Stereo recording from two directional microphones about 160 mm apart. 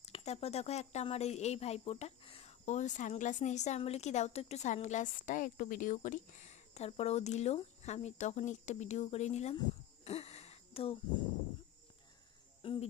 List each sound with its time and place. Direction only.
0.0 s a woman's voice: 40° left (ahead or behind)
10.0 s a sound: 40° left (ahead or behind)
12.6 s cricket: 35° left (ahead or behind)